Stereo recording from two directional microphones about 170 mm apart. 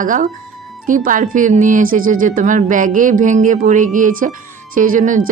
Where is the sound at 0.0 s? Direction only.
50° right (ahead or behind).